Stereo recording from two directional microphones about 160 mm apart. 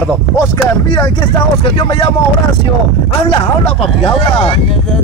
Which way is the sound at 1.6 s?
35° left (ahead or behind).